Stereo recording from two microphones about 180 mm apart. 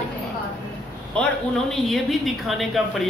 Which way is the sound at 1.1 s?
5° left (ahead or behind).